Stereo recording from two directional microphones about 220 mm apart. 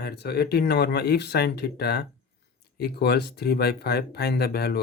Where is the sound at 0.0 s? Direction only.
45° left (ahead or behind).